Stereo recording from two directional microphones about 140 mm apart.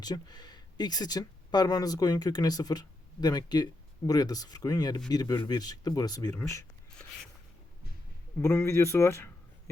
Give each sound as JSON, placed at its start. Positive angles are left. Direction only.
{"t": 0.0, "sound": "speech", "side_deg": 30}
{"t": 8.4, "sound": "speech", "side_deg": 20}